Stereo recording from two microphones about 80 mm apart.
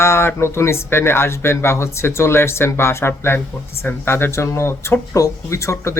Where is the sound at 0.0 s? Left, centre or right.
Left.